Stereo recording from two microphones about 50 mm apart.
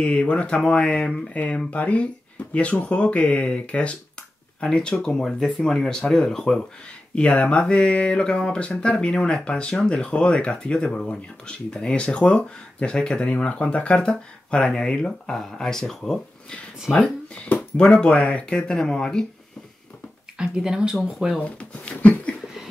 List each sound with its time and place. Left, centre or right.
0.0 s speech: left
1.3 s speech: left; by 6.6 s centre
7.2 s speech: left; by 16.2 s centre
16.9 s speech: left
20.3 s speech: centre
21.4 s speech: left